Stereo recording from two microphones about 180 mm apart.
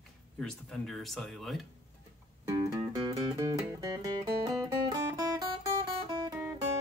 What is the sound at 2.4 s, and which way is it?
Music, 20° right (ahead or behind).